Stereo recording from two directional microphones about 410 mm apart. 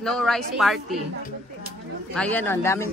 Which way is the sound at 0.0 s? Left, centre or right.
Centre.